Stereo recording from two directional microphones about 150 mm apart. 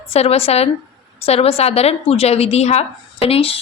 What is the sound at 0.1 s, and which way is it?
A woman's voice, 45° left (ahead or behind).